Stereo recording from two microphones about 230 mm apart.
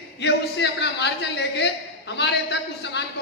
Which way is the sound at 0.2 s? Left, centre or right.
Left.